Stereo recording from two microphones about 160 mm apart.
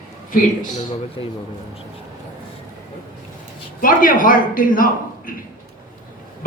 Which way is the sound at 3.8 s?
60° left (ahead or behind).